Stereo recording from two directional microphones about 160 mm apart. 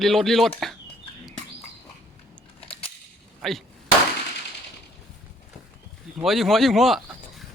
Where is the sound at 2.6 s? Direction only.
35° left (ahead or behind).